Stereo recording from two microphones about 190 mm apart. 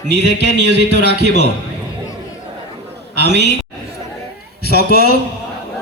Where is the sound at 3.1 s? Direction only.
65° right (ahead or behind).